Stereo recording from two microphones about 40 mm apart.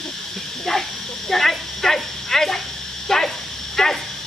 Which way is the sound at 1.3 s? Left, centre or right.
Centre.